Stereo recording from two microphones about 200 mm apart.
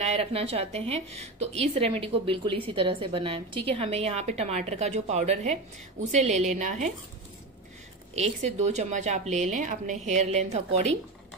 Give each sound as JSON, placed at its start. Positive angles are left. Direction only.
{"t": 0.0, "sound": "a woman's voice", "side_deg": -30}
{"t": 8.1, "sound": "a woman's voice", "side_deg": -35}